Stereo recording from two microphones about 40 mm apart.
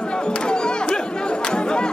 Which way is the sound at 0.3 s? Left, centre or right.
Left.